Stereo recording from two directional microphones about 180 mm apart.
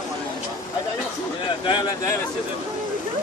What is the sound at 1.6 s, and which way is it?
Speech, 25° left (ahead or behind).